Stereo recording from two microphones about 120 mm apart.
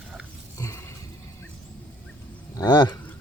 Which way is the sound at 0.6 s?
25° left (ahead or behind).